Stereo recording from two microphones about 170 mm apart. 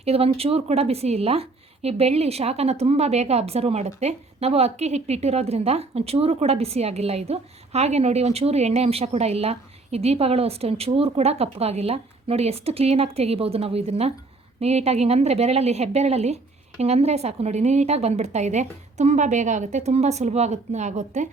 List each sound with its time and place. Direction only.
0.0 s a woman's voice: 35° right (ahead or behind)